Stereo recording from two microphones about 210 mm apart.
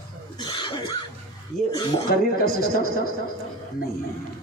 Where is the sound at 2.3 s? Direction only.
45° left (ahead or behind).